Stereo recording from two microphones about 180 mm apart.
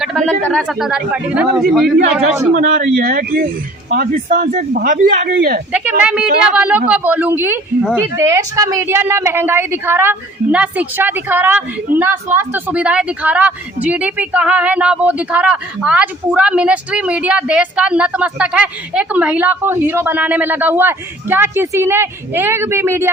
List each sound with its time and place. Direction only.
0.0 s speech: centre (ahead or behind)
2.6 s speech: 45° right (ahead or behind)
5.7 s speech: 10° right (ahead or behind)